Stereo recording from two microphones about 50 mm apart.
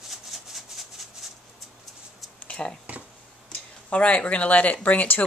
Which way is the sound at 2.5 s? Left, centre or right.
Centre.